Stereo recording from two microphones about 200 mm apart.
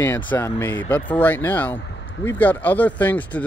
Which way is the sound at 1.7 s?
65° left (ahead or behind).